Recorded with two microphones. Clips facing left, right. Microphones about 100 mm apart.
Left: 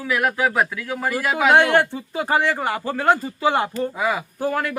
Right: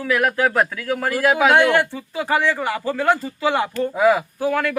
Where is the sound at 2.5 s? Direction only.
35° left (ahead or behind).